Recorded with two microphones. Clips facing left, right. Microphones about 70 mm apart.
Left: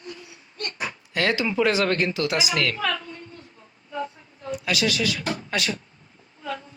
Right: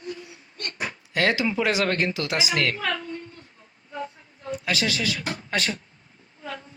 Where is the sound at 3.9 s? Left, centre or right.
Right.